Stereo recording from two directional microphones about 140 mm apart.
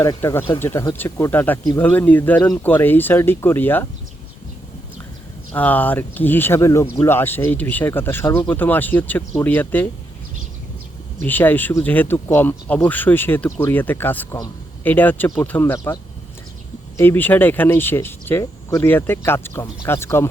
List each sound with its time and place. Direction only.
0.0 s speech: 25° left (ahead or behind)
5.5 s speech: 10° left (ahead or behind)
11.2 s speech: 15° left (ahead or behind)
17.0 s speech: 15° left (ahead or behind)